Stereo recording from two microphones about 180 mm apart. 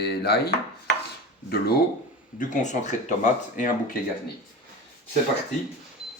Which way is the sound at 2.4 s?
40° left (ahead or behind).